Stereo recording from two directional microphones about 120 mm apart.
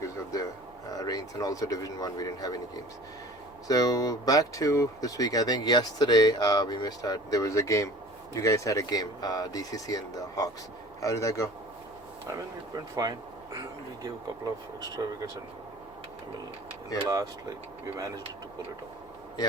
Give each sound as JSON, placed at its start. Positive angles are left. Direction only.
{"t": 0.0, "sound": "a sound", "side_deg": 30}
{"t": 0.9, "sound": "speech", "side_deg": 30}
{"t": 13.0, "sound": "speech", "side_deg": -30}
{"t": 17.9, "sound": "speech", "side_deg": -30}